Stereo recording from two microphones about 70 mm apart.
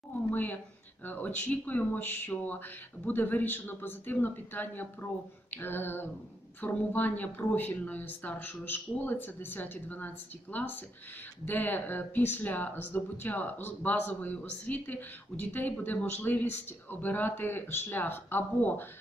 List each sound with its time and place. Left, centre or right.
0.3 s speech: left